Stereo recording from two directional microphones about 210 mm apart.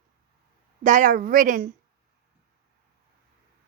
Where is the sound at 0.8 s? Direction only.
35° right (ahead or behind).